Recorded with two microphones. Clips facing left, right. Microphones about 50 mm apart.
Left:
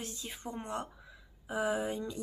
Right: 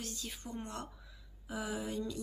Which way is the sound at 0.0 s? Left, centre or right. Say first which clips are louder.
Left 2 dB; left.